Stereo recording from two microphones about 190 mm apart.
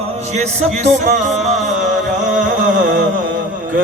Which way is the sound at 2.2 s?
45° right (ahead or behind).